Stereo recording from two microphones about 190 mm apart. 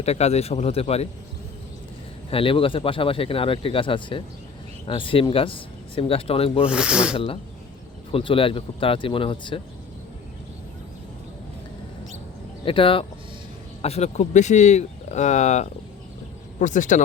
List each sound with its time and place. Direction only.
0.0 s speech: 35° left (ahead or behind)
2.3 s speech: 30° left (ahead or behind)
6.7 s speech: 5° right (ahead or behind)
8.1 s speech: 30° left (ahead or behind)
12.6 s speech: 30° left (ahead or behind)